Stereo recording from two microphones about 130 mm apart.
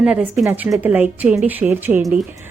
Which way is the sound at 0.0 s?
10° right (ahead or behind).